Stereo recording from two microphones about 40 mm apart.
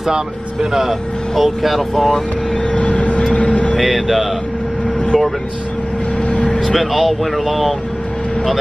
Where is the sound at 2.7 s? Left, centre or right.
Left.